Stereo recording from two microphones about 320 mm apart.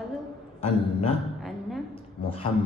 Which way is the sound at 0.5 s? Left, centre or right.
Centre.